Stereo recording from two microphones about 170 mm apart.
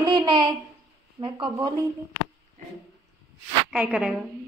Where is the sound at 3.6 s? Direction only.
5° right (ahead or behind).